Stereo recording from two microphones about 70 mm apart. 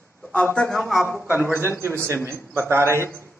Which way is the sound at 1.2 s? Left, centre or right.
Right.